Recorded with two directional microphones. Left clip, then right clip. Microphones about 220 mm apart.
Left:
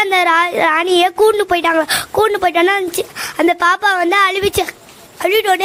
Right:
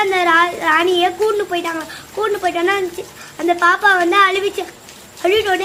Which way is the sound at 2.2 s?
55° left (ahead or behind).